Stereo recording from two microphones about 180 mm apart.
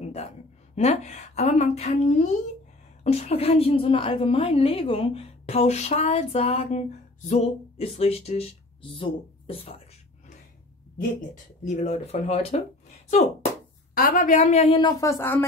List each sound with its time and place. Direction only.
0.7 s a woman's voice: 40° left (ahead or behind)
11.1 s a woman's voice: 40° left (ahead or behind)
13.9 s a woman's voice: 50° left (ahead or behind); by 15.4 s 15° left (ahead or behind)